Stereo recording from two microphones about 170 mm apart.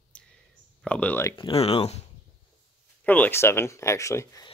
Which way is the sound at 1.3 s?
35° left (ahead or behind).